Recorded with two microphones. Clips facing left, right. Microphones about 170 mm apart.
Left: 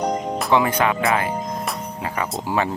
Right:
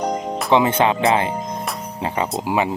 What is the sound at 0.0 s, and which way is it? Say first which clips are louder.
Music: even; centre (ahead or behind).